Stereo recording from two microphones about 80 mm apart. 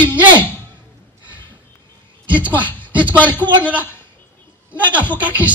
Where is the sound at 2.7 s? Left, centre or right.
Right.